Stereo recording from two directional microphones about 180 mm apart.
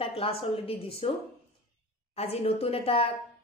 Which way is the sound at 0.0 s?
30° left (ahead or behind).